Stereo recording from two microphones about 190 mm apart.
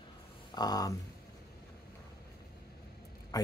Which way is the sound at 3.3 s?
20° left (ahead or behind).